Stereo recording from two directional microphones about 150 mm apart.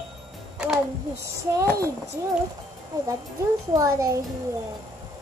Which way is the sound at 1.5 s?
20° right (ahead or behind).